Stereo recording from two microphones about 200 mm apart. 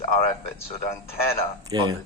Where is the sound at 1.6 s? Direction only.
15° right (ahead or behind).